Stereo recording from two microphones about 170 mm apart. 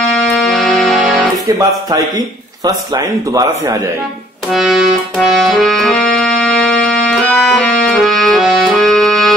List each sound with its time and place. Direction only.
0.3 s music: centre (ahead or behind)
1.9 s speech: 20° right (ahead or behind)
4.5 s music: centre (ahead or behind)